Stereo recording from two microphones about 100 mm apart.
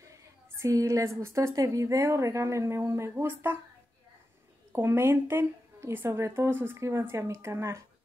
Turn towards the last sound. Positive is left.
turn(degrees=-30)  # may be behind; listen again after turning